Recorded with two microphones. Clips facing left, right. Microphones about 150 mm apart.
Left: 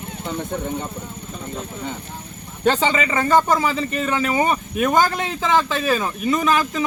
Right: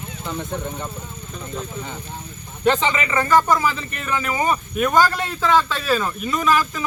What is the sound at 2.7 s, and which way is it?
A man's voice, 30° left (ahead or behind).